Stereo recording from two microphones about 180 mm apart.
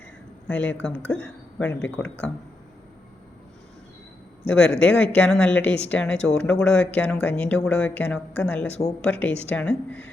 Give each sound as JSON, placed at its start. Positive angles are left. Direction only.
{"t": 0.4, "sound": "speech", "side_deg": 5}
{"t": 4.4, "sound": "speech", "side_deg": 5}